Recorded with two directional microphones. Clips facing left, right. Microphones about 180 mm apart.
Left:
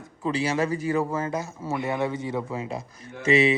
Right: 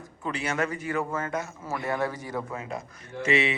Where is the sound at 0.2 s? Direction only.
30° left (ahead or behind).